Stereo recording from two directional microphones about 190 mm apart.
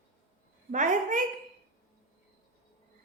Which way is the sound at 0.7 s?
40° right (ahead or behind).